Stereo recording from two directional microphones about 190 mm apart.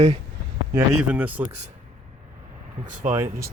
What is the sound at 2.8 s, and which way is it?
Speech, 45° right (ahead or behind).